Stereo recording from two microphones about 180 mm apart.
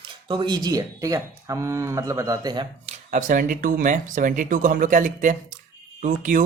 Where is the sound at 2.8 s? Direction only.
45° right (ahead or behind).